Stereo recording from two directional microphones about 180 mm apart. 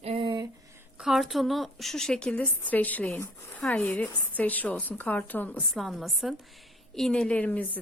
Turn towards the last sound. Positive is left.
turn(degrees=10)  # may be behind; listen again after turning